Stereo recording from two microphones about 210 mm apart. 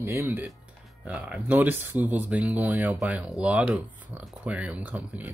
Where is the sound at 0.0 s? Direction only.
10° right (ahead or behind).